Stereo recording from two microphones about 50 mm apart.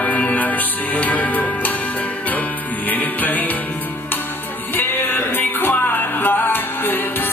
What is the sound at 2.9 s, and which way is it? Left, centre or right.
Music, left.